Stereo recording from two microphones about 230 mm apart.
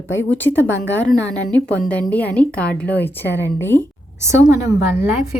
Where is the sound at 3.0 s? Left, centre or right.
Left.